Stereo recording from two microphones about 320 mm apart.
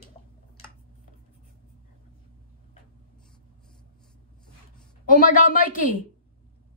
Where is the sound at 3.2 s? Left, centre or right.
Centre.